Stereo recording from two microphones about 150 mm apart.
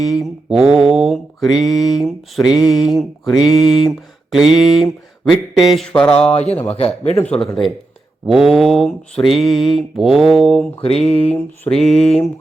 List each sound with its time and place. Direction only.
0.1 s mantra: centre (ahead or behind)
6.3 s a man's voice: 45° left (ahead or behind)
7.3 s mantra: centre (ahead or behind)
11.0 s a man's voice: 45° left (ahead or behind)
11.3 s mantra: 5° left (ahead or behind)